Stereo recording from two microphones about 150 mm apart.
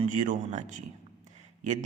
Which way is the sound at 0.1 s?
60° right (ahead or behind).